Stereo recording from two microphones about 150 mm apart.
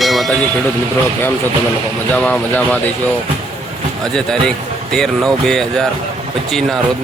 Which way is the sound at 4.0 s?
5° left (ahead or behind).